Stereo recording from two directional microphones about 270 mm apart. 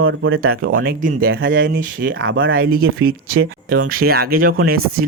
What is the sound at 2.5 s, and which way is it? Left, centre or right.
Speech, right.